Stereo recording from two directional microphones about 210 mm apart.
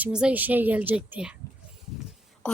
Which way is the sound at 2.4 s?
5° left (ahead or behind).